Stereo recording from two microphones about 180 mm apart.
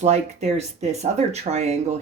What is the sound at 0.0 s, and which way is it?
Speech, 40° right (ahead or behind).